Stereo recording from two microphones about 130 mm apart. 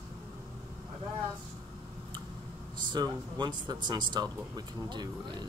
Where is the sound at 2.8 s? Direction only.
35° right (ahead or behind).